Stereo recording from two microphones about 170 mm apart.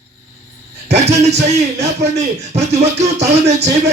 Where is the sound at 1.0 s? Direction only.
40° right (ahead or behind).